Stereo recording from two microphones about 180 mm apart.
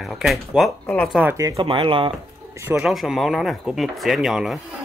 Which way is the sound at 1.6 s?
30° right (ahead or behind).